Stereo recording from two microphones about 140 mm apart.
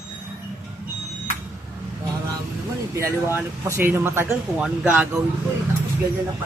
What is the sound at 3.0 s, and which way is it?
Speech, 20° right (ahead or behind).